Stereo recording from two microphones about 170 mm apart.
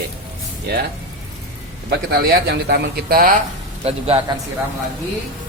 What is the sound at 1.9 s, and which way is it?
Speech, 65° right (ahead or behind).